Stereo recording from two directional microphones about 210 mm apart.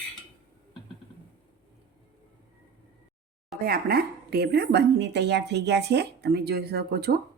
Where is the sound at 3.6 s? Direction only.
45° right (ahead or behind).